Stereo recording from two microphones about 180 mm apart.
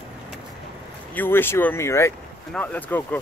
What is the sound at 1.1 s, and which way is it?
Speech, 10° left (ahead or behind).